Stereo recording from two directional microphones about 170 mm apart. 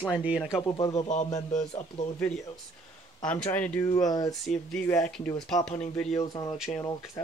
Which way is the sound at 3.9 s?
20° left (ahead or behind).